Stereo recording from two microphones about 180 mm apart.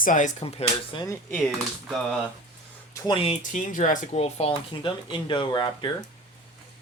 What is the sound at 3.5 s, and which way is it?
Speech, 45° left (ahead or behind).